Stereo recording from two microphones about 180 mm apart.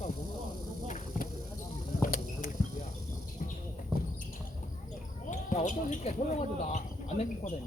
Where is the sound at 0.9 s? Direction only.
45° left (ahead or behind).